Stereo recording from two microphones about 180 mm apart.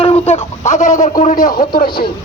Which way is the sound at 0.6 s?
40° left (ahead or behind).